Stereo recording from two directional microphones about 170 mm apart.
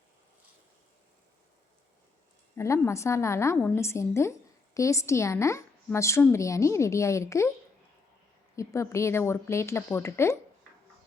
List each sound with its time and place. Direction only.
2.6 s a woman's voice: 15° left (ahead or behind)
8.5 s a woman's voice: 15° left (ahead or behind)